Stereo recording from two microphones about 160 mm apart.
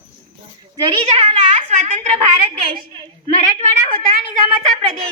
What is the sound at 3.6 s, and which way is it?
Speech, 45° right (ahead or behind).